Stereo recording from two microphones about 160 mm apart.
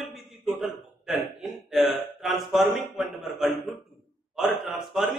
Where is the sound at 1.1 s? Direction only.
Centre (ahead or behind).